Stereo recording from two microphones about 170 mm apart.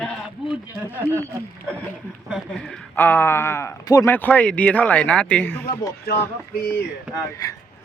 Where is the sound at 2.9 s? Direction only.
10° left (ahead or behind).